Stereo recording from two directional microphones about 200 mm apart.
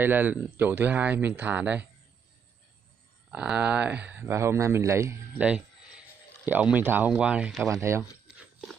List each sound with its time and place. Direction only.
0.0 s speech: 10° right (ahead or behind)
3.3 s speech: 5° right (ahead or behind)
7.7 s speech: 15° right (ahead or behind)